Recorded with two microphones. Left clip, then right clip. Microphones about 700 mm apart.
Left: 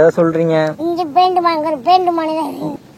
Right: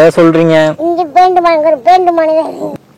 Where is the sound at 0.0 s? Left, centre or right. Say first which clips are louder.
Right 6 dB; right.